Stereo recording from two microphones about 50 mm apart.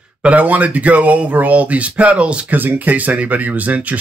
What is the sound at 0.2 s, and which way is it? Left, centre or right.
Speech, right.